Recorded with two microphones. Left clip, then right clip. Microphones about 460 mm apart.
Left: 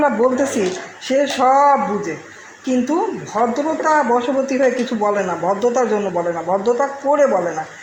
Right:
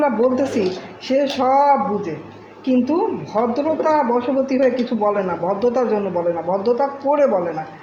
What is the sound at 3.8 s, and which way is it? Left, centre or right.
A man's voice, right.